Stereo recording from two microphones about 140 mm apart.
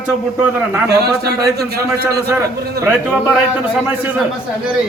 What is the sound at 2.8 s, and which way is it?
Speech, 15° right (ahead or behind).